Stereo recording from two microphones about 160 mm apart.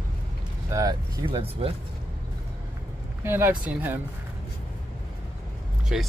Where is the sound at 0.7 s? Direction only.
20° right (ahead or behind).